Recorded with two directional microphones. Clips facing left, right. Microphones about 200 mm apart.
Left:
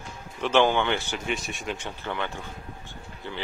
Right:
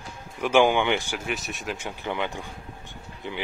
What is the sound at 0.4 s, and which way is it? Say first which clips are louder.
Speech: right 2 dB; 10° right (ahead or behind).